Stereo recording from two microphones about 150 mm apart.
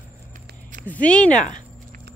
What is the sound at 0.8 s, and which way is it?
Speech, 10° left (ahead or behind).